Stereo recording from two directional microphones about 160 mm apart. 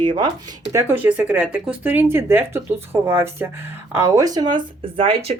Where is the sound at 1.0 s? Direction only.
10° right (ahead or behind).